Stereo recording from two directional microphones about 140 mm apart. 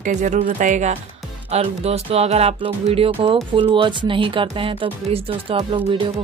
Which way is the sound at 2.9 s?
40° right (ahead or behind).